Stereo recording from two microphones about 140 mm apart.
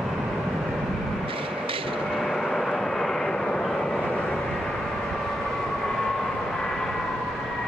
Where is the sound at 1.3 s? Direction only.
40° right (ahead or behind).